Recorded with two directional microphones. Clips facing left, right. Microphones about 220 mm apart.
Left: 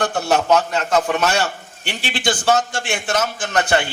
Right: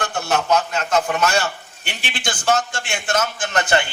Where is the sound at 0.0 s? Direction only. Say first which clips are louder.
Left 4 dB; 45° left (ahead or behind).